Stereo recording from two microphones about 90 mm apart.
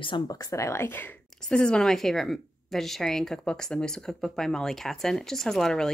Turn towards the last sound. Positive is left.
turn(degrees=5)  # may be behind; listen again after turning